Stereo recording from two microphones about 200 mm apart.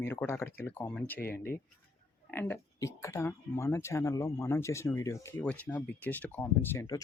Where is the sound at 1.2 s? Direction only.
50° left (ahead or behind).